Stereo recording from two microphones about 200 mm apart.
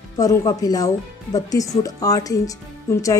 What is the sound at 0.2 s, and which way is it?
Speech, 15° left (ahead or behind).